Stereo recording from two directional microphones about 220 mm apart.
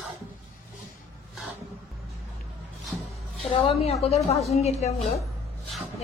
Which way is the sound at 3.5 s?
25° left (ahead or behind).